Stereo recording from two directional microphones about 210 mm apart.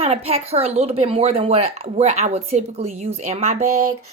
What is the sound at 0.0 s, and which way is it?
Speech, 30° right (ahead or behind).